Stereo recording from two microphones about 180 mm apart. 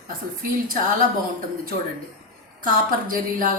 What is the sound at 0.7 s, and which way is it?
Speech, 50° right (ahead or behind).